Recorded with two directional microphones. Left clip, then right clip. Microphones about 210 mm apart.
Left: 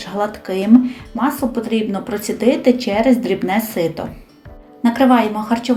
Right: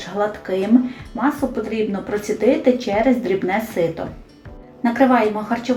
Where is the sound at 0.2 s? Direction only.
35° left (ahead or behind).